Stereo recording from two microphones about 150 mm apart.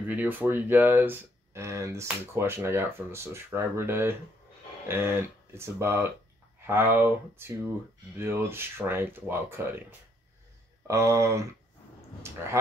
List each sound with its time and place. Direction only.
0.1 s speech: 10° right (ahead or behind)